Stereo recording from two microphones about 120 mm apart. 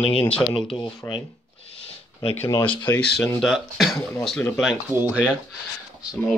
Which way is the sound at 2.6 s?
45° left (ahead or behind).